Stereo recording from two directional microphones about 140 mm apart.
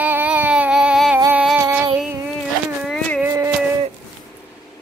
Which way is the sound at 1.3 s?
10° right (ahead or behind).